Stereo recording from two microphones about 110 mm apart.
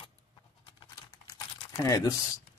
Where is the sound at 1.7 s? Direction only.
30° left (ahead or behind).